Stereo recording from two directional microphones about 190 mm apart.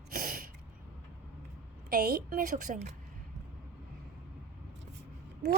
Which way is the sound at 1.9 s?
50° right (ahead or behind).